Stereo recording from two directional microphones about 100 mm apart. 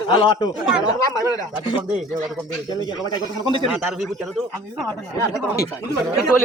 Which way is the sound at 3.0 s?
50° right (ahead or behind).